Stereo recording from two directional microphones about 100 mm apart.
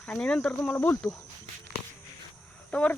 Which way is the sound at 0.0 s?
10° left (ahead or behind).